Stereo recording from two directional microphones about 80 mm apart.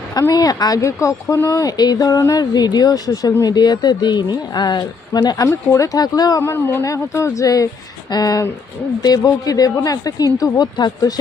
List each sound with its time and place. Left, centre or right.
0.1 s a woman's voice: left
1.5 s a woman's voice: left
2.4 s a woman's voice: left
6.4 s a woman's voice: left